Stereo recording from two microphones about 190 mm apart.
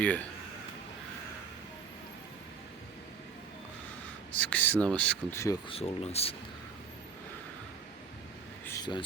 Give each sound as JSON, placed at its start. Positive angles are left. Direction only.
{"t": 4.4, "sound": "speech", "side_deg": 10}
{"t": 5.6, "sound": "speech", "side_deg": 30}
{"t": 8.6, "sound": "a sound", "side_deg": 20}